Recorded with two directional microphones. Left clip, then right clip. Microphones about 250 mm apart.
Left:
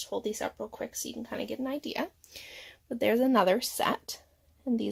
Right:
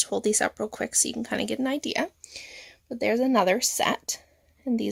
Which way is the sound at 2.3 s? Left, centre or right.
Centre.